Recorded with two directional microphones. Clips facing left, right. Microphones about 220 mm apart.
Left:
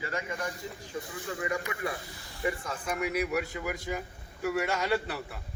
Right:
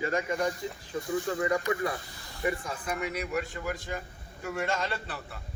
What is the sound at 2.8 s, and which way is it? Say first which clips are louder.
A man's voice: left 7 dB; 5° left (ahead or behind).